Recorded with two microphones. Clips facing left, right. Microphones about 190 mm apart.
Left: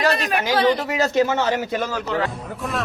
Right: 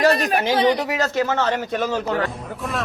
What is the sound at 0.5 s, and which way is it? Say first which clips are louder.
Speech: left 1 dB; 15° right (ahead or behind).